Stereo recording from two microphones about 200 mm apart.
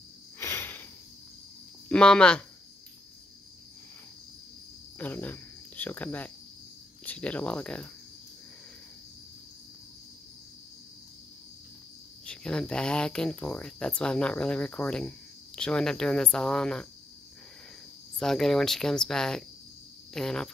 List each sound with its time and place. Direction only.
0.4 s cricket: 10° left (ahead or behind)
1.9 s speech: 5° left (ahead or behind)
4.9 s speech: 10° left (ahead or behind)
12.3 s speech: 5° left (ahead or behind)
18.2 s speech: centre (ahead or behind)